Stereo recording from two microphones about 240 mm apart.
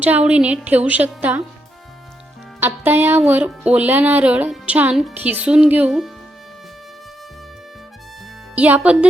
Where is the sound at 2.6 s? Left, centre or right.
Centre.